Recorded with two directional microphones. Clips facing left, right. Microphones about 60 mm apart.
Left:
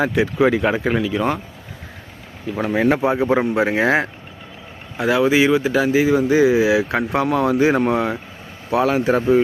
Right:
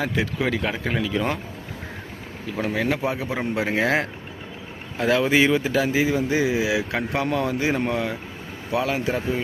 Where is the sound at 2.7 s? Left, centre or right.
Left.